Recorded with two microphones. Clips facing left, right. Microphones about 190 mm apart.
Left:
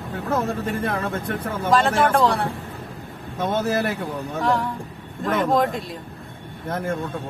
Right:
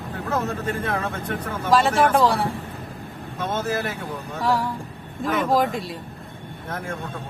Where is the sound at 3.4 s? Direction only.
45° left (ahead or behind).